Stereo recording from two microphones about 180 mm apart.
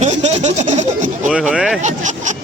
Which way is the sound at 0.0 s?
40° right (ahead or behind).